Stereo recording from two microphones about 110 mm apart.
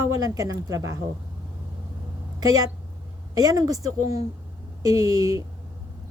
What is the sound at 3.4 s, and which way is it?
Speech, 35° right (ahead or behind).